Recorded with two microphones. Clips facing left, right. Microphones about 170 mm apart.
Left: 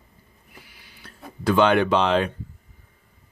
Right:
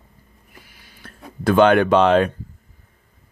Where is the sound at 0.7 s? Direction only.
45° right (ahead or behind).